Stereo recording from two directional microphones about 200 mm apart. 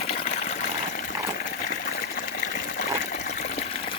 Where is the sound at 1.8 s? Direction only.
55° left (ahead or behind).